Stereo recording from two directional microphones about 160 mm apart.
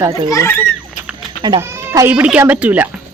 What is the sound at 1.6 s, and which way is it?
Speech, 15° right (ahead or behind).